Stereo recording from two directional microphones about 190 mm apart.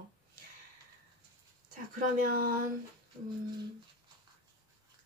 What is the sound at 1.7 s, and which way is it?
Speech, 45° right (ahead or behind).